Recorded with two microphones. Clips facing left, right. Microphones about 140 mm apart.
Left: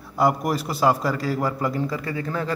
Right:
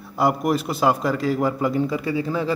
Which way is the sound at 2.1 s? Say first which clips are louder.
Right 4 dB; 10° right (ahead or behind).